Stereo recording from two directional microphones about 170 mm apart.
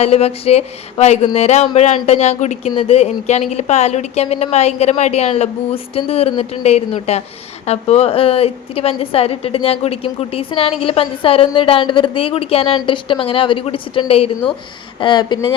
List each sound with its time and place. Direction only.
0.0 s a woman's voice: 35° left (ahead or behind)